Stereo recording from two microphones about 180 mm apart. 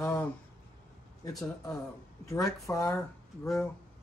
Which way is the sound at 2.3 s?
15° left (ahead or behind).